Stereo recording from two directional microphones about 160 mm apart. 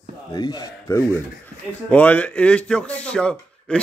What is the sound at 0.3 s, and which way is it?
Speech, 25° left (ahead or behind).